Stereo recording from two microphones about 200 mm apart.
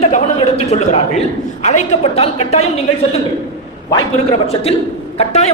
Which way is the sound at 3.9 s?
30° left (ahead or behind).